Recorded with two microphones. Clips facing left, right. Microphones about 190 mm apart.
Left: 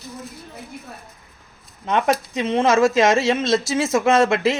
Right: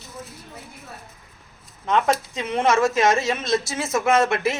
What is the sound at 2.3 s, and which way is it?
Speech, 25° left (ahead or behind).